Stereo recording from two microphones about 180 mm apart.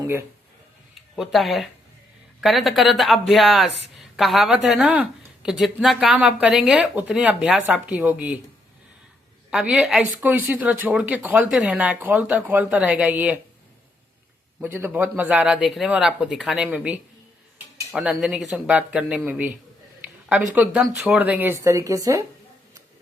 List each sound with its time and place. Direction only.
0.0 s speech: 15° right (ahead or behind)
1.1 s speech: centre (ahead or behind)
9.5 s a woman's voice: 5° right (ahead or behind)
14.6 s a woman's voice: 15° right (ahead or behind)